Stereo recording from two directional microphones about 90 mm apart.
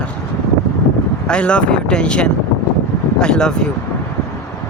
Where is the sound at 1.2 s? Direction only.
10° left (ahead or behind).